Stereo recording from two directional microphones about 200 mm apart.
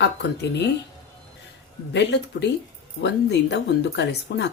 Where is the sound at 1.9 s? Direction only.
60° left (ahead or behind).